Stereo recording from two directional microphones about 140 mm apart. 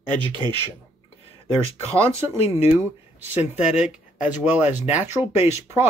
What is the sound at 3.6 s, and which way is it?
Speech, 10° right (ahead or behind).